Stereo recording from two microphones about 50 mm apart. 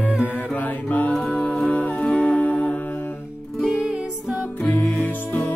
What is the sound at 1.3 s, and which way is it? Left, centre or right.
Music, left.